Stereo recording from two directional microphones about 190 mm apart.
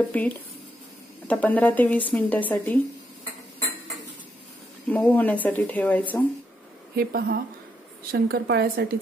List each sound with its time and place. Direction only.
0.1 s speech: 10° left (ahead or behind)
4.8 s speech: 10° left (ahead or behind)
7.0 s a woman's voice: 55° right (ahead or behind)